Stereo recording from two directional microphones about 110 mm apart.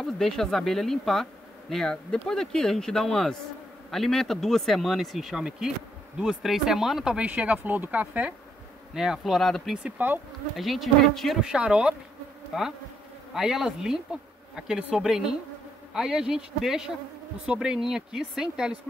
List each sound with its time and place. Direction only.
0.0 s speech: 5° left (ahead or behind)
9.8 s speech: 15° right (ahead or behind)
10.5 s speech: centre (ahead or behind)